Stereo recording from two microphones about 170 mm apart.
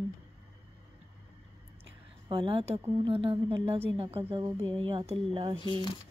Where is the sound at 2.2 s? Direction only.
30° right (ahead or behind).